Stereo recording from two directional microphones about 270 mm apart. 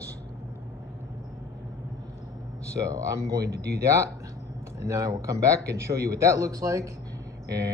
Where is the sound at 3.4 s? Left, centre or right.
Right.